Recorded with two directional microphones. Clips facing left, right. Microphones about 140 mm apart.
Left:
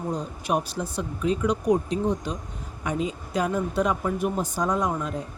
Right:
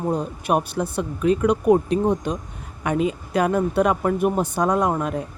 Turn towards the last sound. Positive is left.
turn(degrees=-60)  # may be behind; listen again after turning